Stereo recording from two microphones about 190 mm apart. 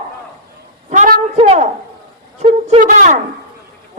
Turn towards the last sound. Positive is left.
turn(degrees=-40)  # may be behind; listen again after turning